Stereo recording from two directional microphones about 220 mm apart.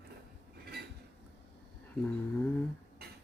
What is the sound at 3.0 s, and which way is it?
Beatboxing, 45° right (ahead or behind).